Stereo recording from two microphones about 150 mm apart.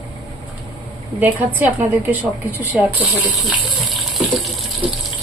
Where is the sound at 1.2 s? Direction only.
10° right (ahead or behind).